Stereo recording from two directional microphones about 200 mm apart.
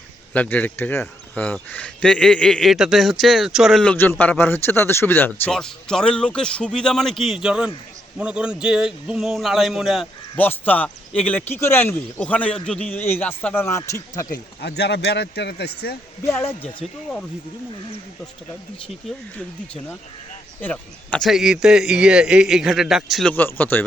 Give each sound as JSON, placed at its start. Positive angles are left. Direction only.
{"t": 0.3, "sound": "speech", "side_deg": 10}
{"t": 10.3, "sound": "speech", "side_deg": 10}
{"t": 14.3, "sound": "speech", "side_deg": 55}
{"t": 16.2, "sound": "speech", "side_deg": 10}
{"t": 20.6, "sound": "speech", "side_deg": 5}
{"t": 23.3, "sound": "speech", "side_deg": 10}